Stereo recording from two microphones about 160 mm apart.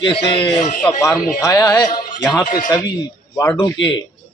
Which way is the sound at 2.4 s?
60° left (ahead or behind).